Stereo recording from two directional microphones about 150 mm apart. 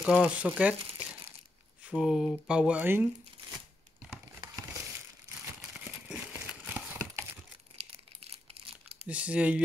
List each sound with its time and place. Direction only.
0.0 s speech: centre (ahead or behind)
1.8 s speech: 5° right (ahead or behind)
5.4 s a sound: 5° right (ahead or behind)
6.6 s crumpling: 15° right (ahead or behind)
7.7 s crumpling: 45° right (ahead or behind)
9.0 s speech: 10° right (ahead or behind)